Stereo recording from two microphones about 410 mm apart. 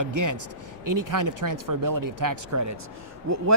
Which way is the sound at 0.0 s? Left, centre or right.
Right.